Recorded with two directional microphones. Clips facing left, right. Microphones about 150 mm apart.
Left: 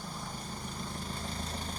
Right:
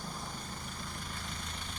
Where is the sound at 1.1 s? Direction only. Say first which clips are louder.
Left 5 dB; 35° left (ahead or behind).